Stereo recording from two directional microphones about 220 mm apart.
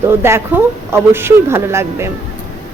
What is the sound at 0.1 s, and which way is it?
Speech, 10° right (ahead or behind).